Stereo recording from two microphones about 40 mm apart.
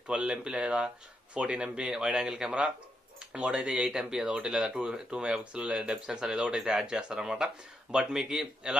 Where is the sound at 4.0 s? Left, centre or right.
Centre.